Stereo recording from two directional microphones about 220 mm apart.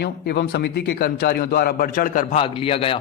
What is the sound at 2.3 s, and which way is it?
Speech, 25° left (ahead or behind).